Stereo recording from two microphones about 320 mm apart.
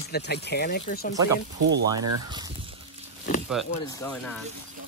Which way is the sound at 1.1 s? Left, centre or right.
Centre.